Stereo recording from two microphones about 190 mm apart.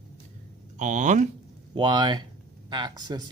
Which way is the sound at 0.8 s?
40° right (ahead or behind).